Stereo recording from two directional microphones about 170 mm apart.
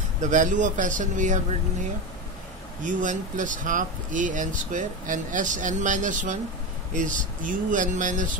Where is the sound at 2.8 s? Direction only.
50° right (ahead or behind).